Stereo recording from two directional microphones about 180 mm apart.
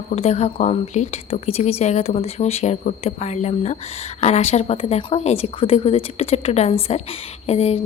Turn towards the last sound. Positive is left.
turn(degrees=35)  # may be behind; listen again after turning